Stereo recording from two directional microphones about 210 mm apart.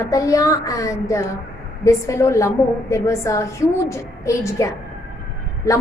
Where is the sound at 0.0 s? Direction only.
15° left (ahead or behind).